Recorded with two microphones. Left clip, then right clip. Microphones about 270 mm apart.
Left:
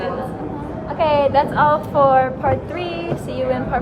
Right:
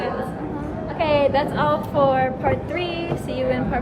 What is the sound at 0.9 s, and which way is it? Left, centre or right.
A woman's voice, centre.